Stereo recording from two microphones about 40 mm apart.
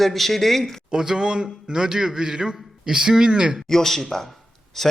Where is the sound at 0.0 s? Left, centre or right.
Centre.